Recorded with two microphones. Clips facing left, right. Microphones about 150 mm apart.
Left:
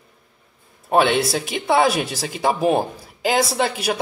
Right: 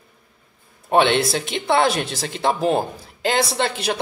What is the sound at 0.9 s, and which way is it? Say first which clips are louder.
Speech: even; 5° left (ahead or behind).